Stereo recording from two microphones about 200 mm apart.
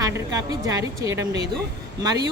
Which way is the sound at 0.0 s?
15° right (ahead or behind).